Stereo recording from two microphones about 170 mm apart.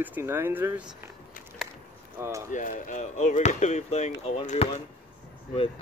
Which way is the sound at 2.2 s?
15° right (ahead or behind).